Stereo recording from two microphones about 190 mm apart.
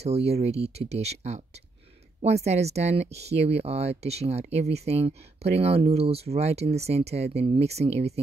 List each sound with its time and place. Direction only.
0.0 s speech: 35° right (ahead or behind)